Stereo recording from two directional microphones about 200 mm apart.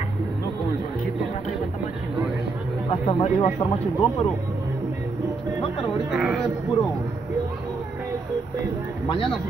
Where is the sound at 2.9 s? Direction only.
30° left (ahead or behind).